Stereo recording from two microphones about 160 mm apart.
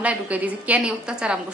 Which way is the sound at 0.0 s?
10° right (ahead or behind).